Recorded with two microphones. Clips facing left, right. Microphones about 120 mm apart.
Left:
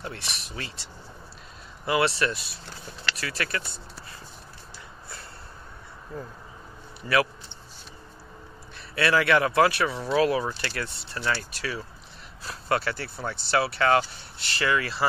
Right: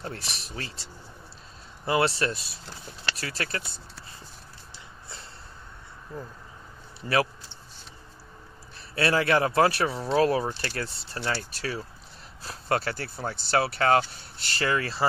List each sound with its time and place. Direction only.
0.0 s speech: 40° right (ahead or behind)
1.9 s speech: 35° right (ahead or behind)
3.6 s speech: centre (ahead or behind)
8.9 s speech: 35° right (ahead or behind)